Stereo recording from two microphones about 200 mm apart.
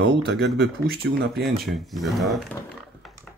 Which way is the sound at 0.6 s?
55° right (ahead or behind).